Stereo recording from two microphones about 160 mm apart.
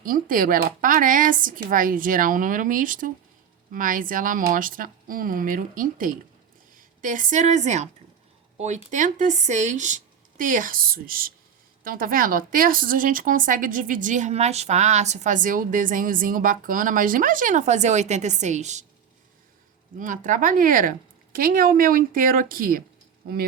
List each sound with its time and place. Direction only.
0.0 s speech: 60° right (ahead or behind)
20.0 s speech: 55° right (ahead or behind)